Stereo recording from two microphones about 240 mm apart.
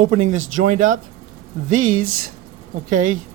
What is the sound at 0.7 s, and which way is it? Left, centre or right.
Speech, right.